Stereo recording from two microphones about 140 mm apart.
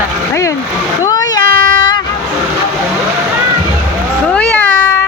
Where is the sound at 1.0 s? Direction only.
25° left (ahead or behind).